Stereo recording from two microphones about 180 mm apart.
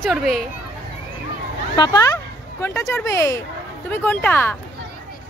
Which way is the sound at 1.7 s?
20° left (ahead or behind).